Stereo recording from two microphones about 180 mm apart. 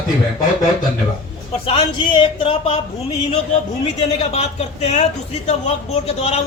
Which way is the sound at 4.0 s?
35° left (ahead or behind).